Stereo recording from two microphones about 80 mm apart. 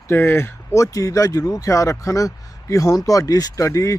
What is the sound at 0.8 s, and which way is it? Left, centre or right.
Speech, left.